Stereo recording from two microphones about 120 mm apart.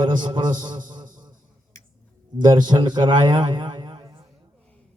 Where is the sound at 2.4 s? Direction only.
35° right (ahead or behind).